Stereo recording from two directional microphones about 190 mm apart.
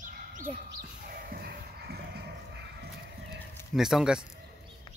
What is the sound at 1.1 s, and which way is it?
Music, 50° right (ahead or behind).